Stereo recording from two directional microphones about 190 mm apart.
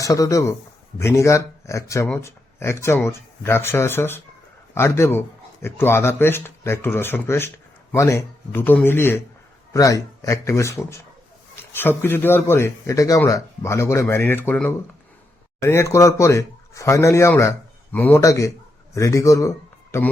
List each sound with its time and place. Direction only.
0.0 s speech: 15° left (ahead or behind)